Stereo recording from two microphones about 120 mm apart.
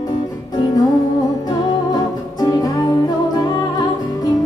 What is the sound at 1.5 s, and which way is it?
Music, 35° left (ahead or behind).